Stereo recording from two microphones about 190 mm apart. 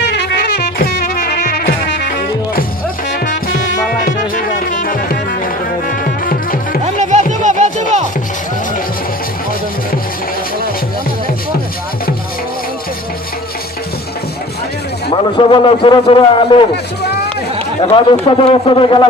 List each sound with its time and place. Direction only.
0.1 s music: 60° left (ahead or behind)
1.6 s music: 65° left (ahead or behind)
3.6 s music: 70° left (ahead or behind)
4.4 s music: 45° left (ahead or behind)
6.8 s music: 40° right (ahead or behind)
15.4 s a man's voice: 25° left (ahead or behind)
17.8 s a man's voice: 25° left (ahead or behind)